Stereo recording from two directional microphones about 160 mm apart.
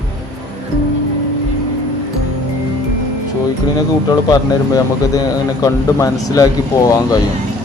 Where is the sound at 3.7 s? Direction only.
25° left (ahead or behind).